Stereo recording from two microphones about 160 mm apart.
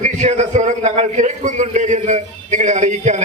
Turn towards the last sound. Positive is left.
turn(degrees=-50)  # may be behind; listen again after turning